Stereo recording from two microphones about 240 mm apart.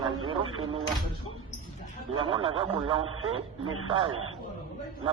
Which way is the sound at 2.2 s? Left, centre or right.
Right.